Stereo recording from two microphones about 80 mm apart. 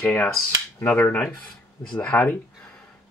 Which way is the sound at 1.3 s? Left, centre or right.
Centre.